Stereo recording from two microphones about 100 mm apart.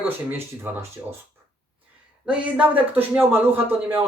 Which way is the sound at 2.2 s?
10° right (ahead or behind).